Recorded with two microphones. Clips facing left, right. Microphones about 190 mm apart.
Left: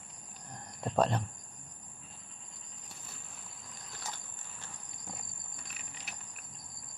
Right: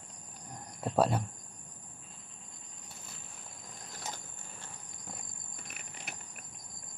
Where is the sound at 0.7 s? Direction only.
5° right (ahead or behind).